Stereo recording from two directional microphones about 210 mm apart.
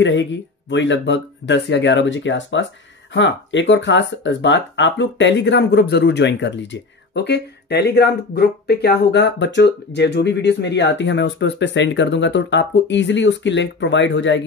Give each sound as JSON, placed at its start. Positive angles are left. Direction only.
{"t": 0.0, "sound": "speech", "side_deg": 60}